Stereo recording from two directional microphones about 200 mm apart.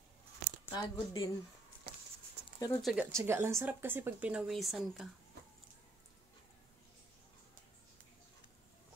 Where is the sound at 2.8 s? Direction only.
Centre (ahead or behind).